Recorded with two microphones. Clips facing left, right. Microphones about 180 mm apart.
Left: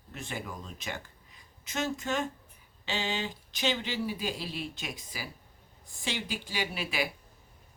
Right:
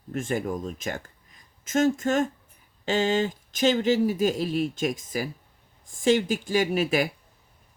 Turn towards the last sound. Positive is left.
turn(degrees=-45)  # may be behind; listen again after turning